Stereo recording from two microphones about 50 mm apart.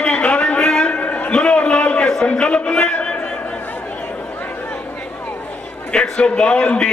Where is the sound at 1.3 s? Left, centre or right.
Left.